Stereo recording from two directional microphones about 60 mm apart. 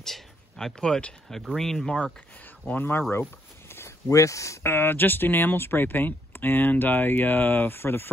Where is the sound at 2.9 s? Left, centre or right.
Left.